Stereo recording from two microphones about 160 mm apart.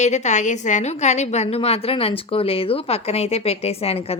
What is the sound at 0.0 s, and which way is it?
A woman's voice, 45° left (ahead or behind).